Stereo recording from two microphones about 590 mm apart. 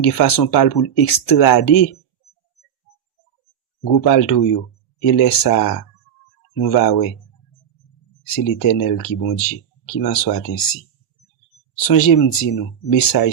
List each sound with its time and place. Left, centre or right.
0.0 s speech: left
3.9 s speech: left
8.3 s speech: left
11.8 s speech: left